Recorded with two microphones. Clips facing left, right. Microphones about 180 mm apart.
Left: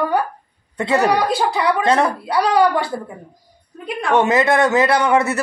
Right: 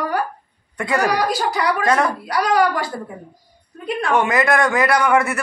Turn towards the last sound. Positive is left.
turn(degrees=25)  # may be behind; listen again after turning